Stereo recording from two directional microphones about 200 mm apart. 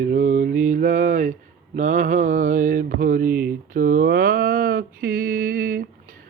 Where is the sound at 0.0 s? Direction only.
40° right (ahead or behind).